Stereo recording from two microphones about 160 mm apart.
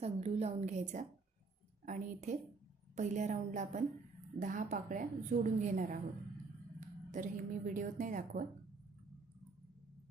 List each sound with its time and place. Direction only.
0.0 s a woman's voice: 40° right (ahead or behind); by 8.4 s 55° right (ahead or behind)